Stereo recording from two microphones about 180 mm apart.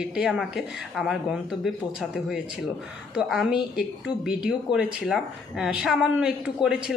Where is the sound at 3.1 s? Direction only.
5° right (ahead or behind).